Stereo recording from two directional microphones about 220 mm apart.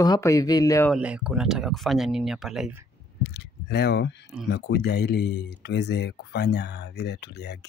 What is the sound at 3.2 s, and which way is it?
Speech, 50° left (ahead or behind).